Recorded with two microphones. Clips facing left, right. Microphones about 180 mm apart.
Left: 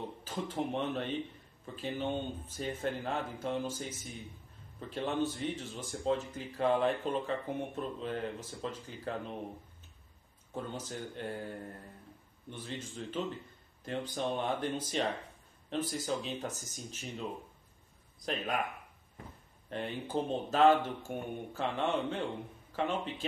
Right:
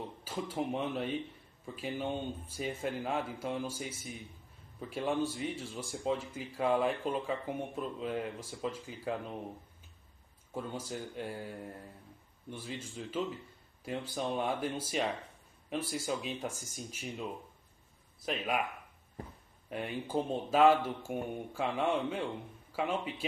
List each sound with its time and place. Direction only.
0.2 s speech: 10° right (ahead or behind)
10.5 s speech: 10° right (ahead or behind)
18.2 s speech: 10° right (ahead or behind)
19.7 s speech: 10° right (ahead or behind)